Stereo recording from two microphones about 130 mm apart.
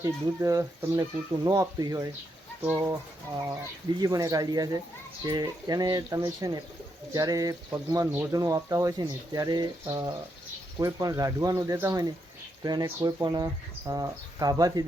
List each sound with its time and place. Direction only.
0.0 s speech: 25° right (ahead or behind)
2.6 s speech: 20° right (ahead or behind)
4.0 s speech: 25° right (ahead or behind)
8.0 s speech: 15° right (ahead or behind)
8.3 s speech: 25° right (ahead or behind)